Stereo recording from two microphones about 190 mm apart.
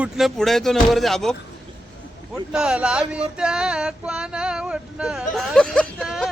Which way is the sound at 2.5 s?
5° right (ahead or behind).